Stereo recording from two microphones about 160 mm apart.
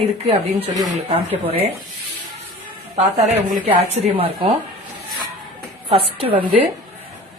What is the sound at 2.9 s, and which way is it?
Speech, 40° right (ahead or behind).